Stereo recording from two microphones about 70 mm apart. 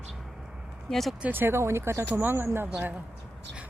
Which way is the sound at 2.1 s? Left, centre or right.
Right.